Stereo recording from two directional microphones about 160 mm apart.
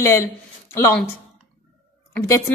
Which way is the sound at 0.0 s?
20° left (ahead or behind).